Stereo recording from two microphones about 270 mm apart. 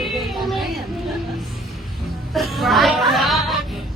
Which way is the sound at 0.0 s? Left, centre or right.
Centre.